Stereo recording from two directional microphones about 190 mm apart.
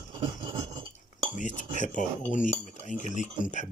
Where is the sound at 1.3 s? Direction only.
40° left (ahead or behind).